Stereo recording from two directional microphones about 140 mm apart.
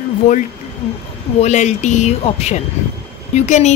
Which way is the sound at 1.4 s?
55° left (ahead or behind).